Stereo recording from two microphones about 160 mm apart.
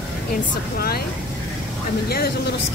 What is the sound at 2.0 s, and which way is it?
Speech, 80° left.